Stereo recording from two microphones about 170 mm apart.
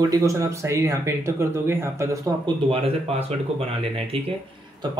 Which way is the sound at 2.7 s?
35° right (ahead or behind).